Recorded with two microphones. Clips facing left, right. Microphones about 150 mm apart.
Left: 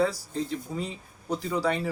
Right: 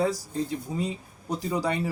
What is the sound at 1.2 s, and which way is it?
Speech, 15° right (ahead or behind).